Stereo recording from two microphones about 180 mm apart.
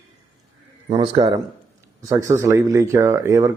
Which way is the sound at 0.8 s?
30° right (ahead or behind).